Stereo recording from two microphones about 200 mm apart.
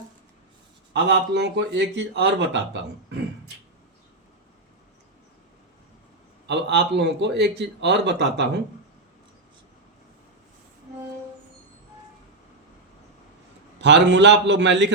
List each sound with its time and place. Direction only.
0.9 s speech: 60° right (ahead or behind)
6.5 s speech: 60° right (ahead or behind)
13.8 s speech: 60° right (ahead or behind)